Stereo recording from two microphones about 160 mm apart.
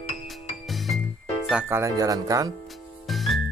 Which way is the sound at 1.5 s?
10° right (ahead or behind).